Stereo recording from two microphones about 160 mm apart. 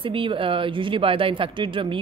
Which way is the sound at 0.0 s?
35° right (ahead or behind).